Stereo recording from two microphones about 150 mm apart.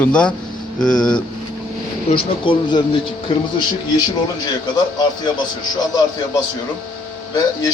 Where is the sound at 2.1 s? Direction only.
30° left (ahead or behind).